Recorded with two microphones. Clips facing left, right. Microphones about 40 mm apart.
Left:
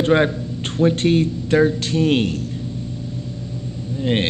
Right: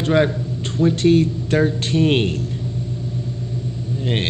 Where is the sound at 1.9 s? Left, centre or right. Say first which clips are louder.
Right 1 dB; right.